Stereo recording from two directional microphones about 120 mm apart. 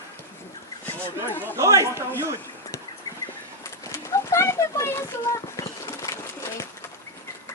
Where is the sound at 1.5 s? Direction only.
25° right (ahead or behind).